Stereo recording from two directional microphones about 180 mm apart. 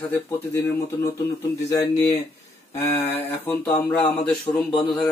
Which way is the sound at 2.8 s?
15° left (ahead or behind).